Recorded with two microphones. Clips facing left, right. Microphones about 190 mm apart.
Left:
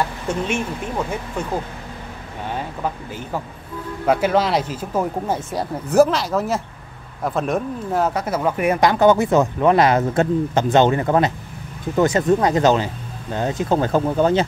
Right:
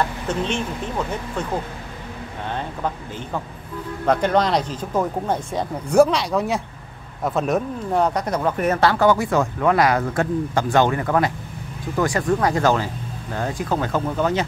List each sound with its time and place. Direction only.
0.3 s speech: 10° left (ahead or behind)
4.0 s speech: 5° left (ahead or behind); by 14.4 s 30° left (ahead or behind)